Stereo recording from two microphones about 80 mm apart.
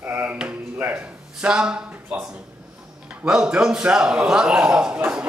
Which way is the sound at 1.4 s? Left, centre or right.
Centre.